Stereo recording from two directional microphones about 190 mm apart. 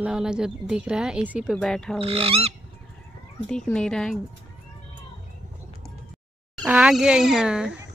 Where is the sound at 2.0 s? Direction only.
30° right (ahead or behind).